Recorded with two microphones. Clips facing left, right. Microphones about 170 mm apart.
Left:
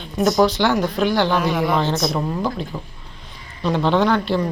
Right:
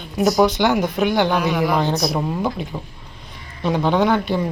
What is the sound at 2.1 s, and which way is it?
A woman's voice, 15° right (ahead or behind).